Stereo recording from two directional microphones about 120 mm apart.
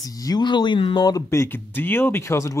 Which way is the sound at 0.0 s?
30° left (ahead or behind).